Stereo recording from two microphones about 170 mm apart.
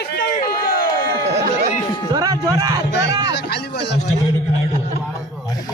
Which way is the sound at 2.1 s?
20° right (ahead or behind).